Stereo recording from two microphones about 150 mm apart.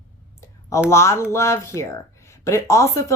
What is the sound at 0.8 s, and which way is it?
A woman's voice, 20° left (ahead or behind).